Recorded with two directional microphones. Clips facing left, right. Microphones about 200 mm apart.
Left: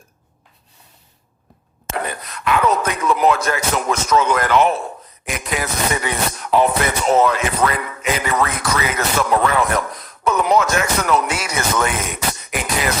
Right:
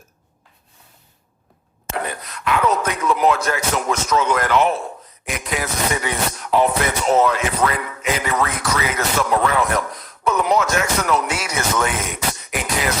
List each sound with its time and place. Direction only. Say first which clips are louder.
1.9 s speech: left 1 dB; 55° left (ahead or behind)